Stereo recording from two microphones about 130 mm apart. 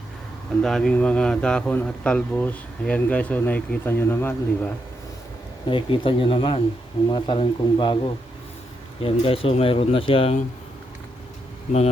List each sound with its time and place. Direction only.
0.6 s speech: 5° left (ahead or behind)
5.6 s a man's voice: 40° left (ahead or behind)
9.0 s speech: 45° left (ahead or behind)